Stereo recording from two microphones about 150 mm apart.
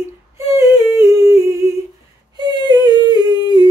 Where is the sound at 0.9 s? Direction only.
20° right (ahead or behind).